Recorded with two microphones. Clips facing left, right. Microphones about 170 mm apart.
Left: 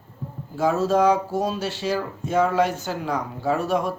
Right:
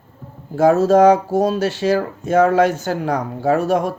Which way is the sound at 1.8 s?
85° right.